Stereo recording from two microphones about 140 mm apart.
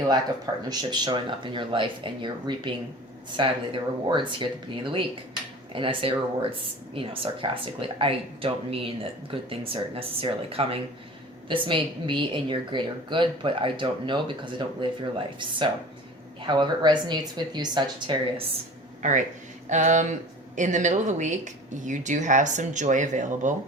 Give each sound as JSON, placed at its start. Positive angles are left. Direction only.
{"t": 0.7, "sound": "a woman's voice", "side_deg": -30}
{"t": 19.0, "sound": "speech", "side_deg": -55}